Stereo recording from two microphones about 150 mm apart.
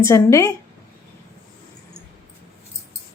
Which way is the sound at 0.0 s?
20° left (ahead or behind).